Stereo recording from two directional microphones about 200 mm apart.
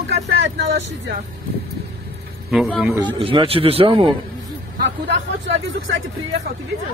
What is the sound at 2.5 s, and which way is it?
Speech, centre (ahead or behind).